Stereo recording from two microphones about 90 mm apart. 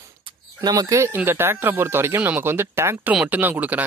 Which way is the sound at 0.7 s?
40° right (ahead or behind).